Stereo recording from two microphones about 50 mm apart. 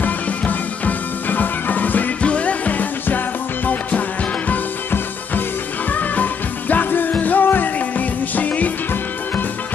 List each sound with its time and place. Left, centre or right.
0.0 s music: left
2.2 s music: left
5.9 s music: left